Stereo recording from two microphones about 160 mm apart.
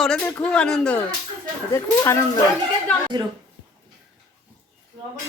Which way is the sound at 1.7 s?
15° left (ahead or behind).